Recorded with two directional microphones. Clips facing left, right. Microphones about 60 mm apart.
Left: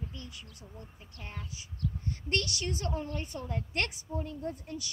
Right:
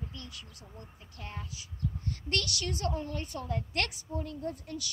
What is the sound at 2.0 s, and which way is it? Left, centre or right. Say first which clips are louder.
A woman's voice: left 1 dB; left.